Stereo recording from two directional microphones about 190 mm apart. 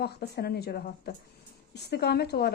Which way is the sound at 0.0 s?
60° left (ahead or behind).